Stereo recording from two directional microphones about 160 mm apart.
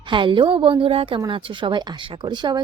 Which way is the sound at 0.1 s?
30° right (ahead or behind).